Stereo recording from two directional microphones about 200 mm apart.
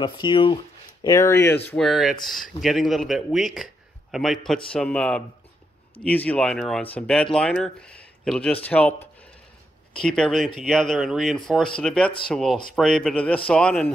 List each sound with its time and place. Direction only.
0.0 s speech: 25° left (ahead or behind)
1.7 s speech: centre (ahead or behind)
9.9 s speech: 5° left (ahead or behind)